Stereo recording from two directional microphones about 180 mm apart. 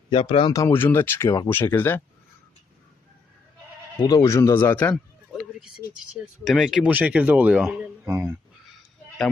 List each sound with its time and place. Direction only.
0.1 s speech: 30° left (ahead or behind); by 2.0 s 10° left (ahead or behind)
4.0 s speech: 20° left (ahead or behind)
5.4 s a sound: 5° right (ahead or behind)
6.4 s a man's voice: centre (ahead or behind)